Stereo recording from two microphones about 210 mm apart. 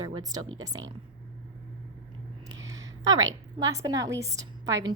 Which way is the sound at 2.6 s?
15° right (ahead or behind).